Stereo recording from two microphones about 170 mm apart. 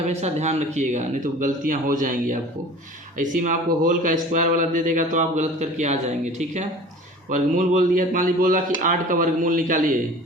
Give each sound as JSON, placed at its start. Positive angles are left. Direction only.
{"t": 0.1, "sound": "speech", "side_deg": -40}